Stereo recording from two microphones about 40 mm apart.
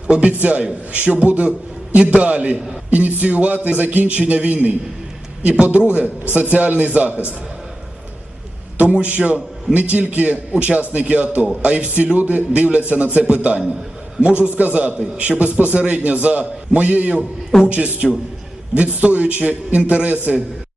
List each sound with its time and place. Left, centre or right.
0.1 s a man's voice: right
0.3 s a man's voice: right
8.8 s a man's voice: right
18.0 s a man's voice: centre
18.7 s a man's voice: right